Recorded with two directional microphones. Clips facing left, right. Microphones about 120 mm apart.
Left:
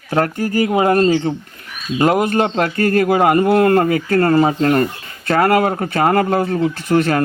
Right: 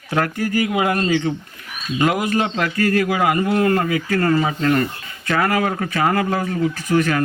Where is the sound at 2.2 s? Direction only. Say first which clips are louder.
Left 4 dB; 50° left (ahead or behind).